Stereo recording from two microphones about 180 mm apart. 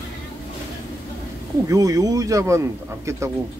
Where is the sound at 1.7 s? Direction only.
20° right (ahead or behind).